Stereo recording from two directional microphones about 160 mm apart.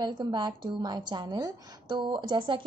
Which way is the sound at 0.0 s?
25° right (ahead or behind).